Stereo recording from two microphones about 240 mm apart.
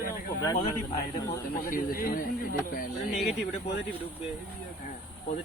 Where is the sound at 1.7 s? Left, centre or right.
Left.